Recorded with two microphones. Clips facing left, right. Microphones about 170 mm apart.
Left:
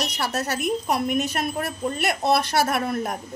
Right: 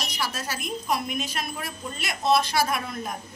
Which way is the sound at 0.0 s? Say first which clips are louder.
Left 5 dB; 65° left (ahead or behind).